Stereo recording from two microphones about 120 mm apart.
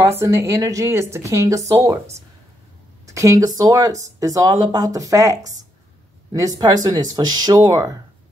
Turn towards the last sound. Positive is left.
turn(degrees=-35)  # may be behind; listen again after turning